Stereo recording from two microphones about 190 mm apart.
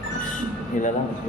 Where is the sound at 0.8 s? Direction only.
40° left (ahead or behind).